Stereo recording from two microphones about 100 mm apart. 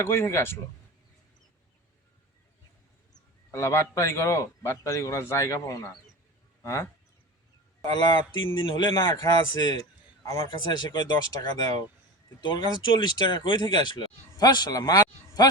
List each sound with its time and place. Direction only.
0.0 s speech: 25° left (ahead or behind)
3.1 s a man's voice: 30° left (ahead or behind)
7.9 s speech: 45° left (ahead or behind)
12.4 s speech: 50° left (ahead or behind)